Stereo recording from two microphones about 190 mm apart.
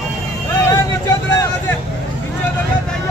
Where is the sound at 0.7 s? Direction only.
20° left (ahead or behind).